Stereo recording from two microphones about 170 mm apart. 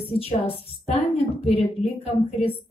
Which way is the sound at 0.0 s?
35° left (ahead or behind).